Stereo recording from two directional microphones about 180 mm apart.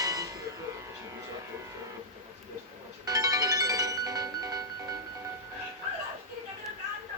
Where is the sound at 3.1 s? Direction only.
20° right (ahead or behind).